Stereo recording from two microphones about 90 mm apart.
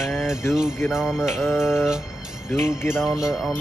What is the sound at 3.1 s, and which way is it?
Music, 5° right (ahead or behind).